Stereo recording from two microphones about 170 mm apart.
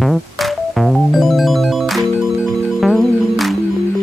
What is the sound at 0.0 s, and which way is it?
Music, centre (ahead or behind).